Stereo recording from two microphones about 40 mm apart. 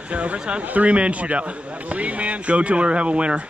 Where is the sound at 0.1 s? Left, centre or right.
Right.